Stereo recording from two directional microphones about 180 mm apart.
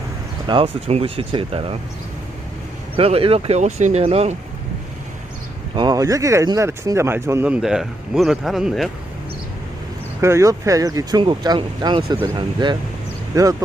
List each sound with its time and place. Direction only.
0.4 s speech: 30° right (ahead or behind)
2.9 s speech: 30° right (ahead or behind)
5.7 s speech: 25° right (ahead or behind); by 8.9 s centre (ahead or behind)
10.2 s speech: 15° right (ahead or behind)